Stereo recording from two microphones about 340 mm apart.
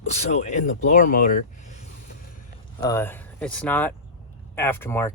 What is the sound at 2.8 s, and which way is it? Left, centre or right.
Speech, centre.